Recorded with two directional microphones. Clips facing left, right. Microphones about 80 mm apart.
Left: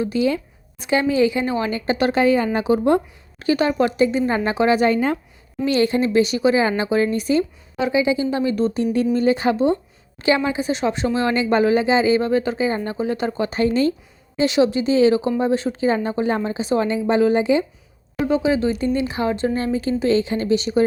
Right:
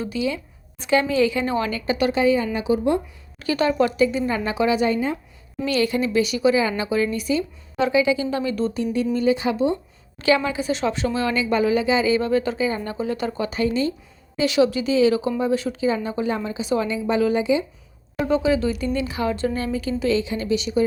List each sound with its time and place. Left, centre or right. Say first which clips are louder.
0.1 s a woman's voice: left 4 dB; left
0.8 s a woman's voice: left 1 dB; centre
1.8 s speech: left 2 dB; left
2.1 s a woman's voice: left 4 dB; left
3.3 s speech: left 2 dB; left
5.6 s speech: left 3 dB; left
7.9 s speech: left 2 dB; left
8.8 s a woman's voice: left 2 dB; left
10.2 s speech: left 1 dB; left
13.6 s a woman's voice: left 4 dB; left
14.3 s speech: left 2 dB; left
18.3 s speech: left 1 dB; centre; by 20.8 s left